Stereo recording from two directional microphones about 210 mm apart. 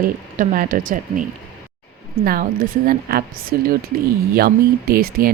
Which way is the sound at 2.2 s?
45° right (ahead or behind).